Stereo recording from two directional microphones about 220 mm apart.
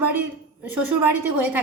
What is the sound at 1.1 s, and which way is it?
Speech, 10° right (ahead or behind).